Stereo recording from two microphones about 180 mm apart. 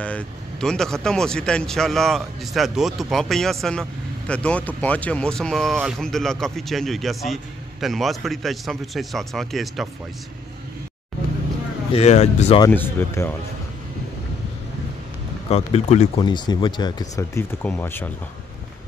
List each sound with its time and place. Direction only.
0.0 s speech: 5° left (ahead or behind)
11.9 s speech: 35° left (ahead or behind)
12.7 s speech: 15° left (ahead or behind)
15.5 s speech: 35° left (ahead or behind)
16.2 s speech: 25° left (ahead or behind)